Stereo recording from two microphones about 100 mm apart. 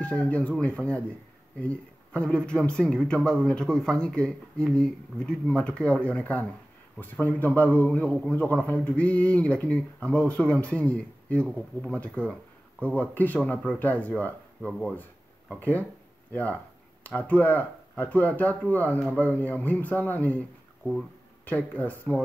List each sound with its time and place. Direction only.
0.0 s speech: 15° left (ahead or behind)
17.0 s speech: 15° left (ahead or behind)